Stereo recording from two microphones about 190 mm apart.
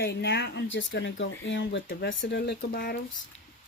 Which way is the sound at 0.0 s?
65° left (ahead or behind).